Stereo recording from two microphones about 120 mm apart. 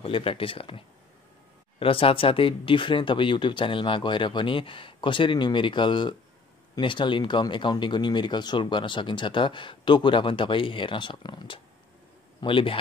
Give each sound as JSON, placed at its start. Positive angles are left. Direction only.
{"t": 0.0, "sound": "speech", "side_deg": 50}